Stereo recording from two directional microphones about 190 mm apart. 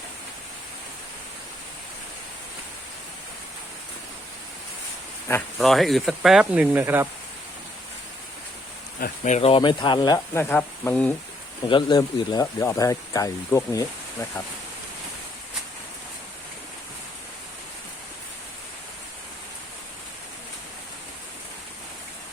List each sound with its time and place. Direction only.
5.5 s speech: centre (ahead or behind)
9.0 s speech: 40° left (ahead or behind); by 10.2 s 25° left (ahead or behind)
10.3 s speech: 10° left (ahead or behind)
11.7 s speech: 20° left (ahead or behind)